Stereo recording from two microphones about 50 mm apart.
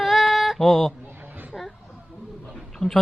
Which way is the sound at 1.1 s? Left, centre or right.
Right.